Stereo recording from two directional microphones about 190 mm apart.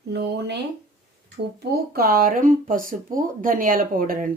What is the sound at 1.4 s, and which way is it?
Speech, 55° right (ahead or behind).